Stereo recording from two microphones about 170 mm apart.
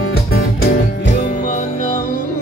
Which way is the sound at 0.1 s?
65° left (ahead or behind).